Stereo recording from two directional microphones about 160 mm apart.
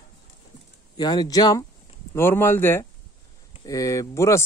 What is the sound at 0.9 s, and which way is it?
Speech, 25° left (ahead or behind).